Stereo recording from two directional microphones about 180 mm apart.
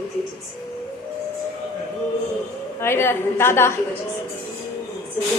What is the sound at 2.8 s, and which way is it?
Speech, 15° left (ahead or behind).